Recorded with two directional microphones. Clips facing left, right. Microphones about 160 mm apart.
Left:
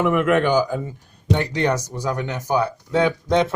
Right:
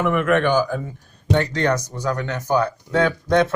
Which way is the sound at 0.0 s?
10° left (ahead or behind).